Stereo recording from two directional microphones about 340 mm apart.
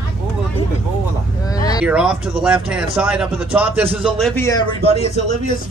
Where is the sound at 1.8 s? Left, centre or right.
Centre.